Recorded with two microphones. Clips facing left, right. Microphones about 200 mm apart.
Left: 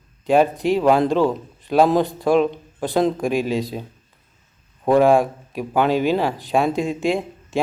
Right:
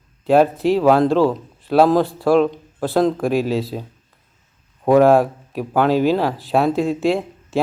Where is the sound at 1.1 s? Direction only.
15° left (ahead or behind).